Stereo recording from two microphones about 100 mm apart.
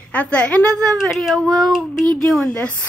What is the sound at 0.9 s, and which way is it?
A child's voice, centre (ahead or behind).